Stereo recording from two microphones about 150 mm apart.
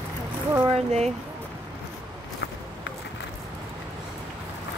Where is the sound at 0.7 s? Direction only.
45° right (ahead or behind).